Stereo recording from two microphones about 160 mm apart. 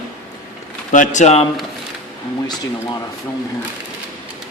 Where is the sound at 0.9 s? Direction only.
50° left (ahead or behind).